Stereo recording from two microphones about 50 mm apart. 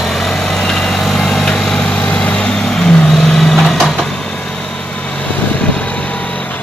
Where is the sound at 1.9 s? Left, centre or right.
Left.